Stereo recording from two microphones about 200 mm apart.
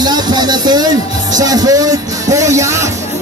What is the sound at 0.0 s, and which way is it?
Music, 20° right (ahead or behind).